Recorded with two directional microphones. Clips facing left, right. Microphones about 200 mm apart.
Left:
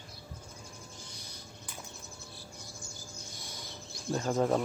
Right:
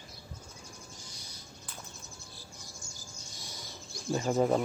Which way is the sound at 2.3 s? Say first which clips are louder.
Left 2 dB; 60° left (ahead or behind).